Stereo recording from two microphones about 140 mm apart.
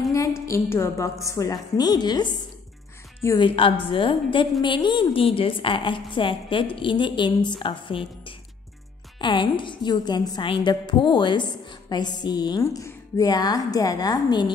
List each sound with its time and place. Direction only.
0.5 s a woman's voice: 20° left (ahead or behind)